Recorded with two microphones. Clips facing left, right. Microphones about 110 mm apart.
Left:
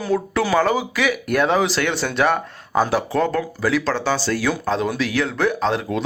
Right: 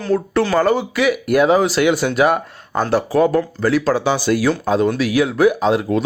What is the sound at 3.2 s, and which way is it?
Speech, 10° right (ahead or behind).